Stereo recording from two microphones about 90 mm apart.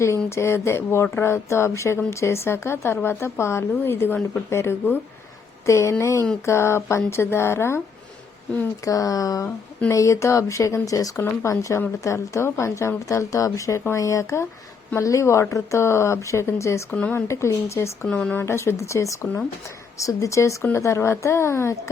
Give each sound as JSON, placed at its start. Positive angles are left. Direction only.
{"t": 0.3, "sound": "a woman's voice", "side_deg": 30}
{"t": 8.8, "sound": "a woman's voice", "side_deg": 40}
{"t": 16.9, "sound": "speech", "side_deg": 20}
{"t": 17.2, "sound": "a woman's voice", "side_deg": 35}
{"t": 18.1, "sound": "speech", "side_deg": 15}
{"t": 18.3, "sound": "a woman's voice", "side_deg": 30}